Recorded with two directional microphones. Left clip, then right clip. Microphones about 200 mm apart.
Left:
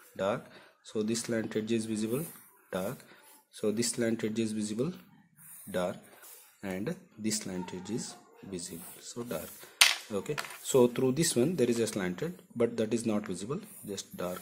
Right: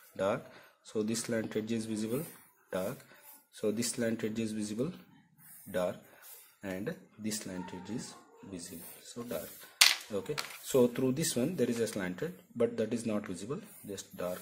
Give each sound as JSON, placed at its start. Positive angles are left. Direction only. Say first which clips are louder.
{"t": 0.1, "sound": "speech", "louder": "left 1 dB", "side_deg": 0}